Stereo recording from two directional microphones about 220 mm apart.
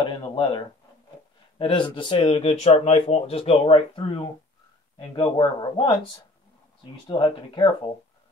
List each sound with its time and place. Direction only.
0.0 s speech: 20° left (ahead or behind)